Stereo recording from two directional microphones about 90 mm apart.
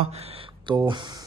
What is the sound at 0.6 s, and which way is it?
Speech, 55° right (ahead or behind).